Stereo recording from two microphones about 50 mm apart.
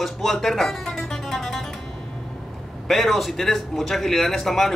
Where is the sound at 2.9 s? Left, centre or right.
Centre.